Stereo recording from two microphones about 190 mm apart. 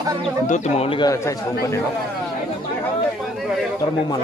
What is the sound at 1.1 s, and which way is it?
Speech, 15° left (ahead or behind).